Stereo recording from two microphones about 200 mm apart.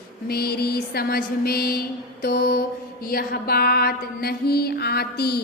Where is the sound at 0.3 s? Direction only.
50° left (ahead or behind).